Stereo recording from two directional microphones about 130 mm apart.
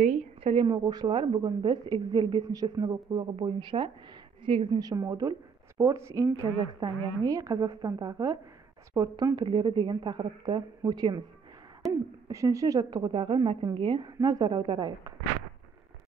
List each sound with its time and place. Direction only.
0.0 s a sound: 60° right (ahead or behind)
0.7 s a woman's voice: 35° right (ahead or behind)
4.7 s a woman's voice: 30° right (ahead or behind)